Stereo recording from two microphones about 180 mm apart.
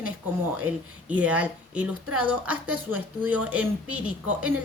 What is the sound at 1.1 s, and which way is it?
Speech, 5° right (ahead or behind).